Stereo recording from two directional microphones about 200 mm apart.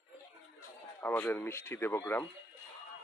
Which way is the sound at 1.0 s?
10° left (ahead or behind).